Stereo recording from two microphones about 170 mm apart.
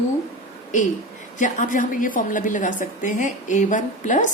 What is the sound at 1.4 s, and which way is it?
A woman's voice, 50° left (ahead or behind).